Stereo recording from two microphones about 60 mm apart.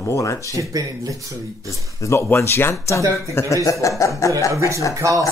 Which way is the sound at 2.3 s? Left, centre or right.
Left.